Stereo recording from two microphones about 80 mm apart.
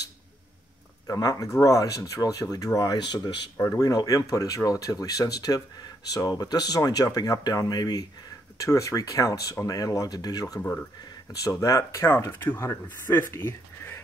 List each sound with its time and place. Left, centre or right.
1.0 s speech: left
8.5 s speech: left
10.6 s speech: left
11.4 s speech: left